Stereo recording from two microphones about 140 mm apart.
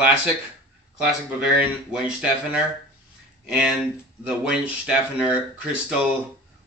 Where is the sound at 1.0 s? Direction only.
5° right (ahead or behind).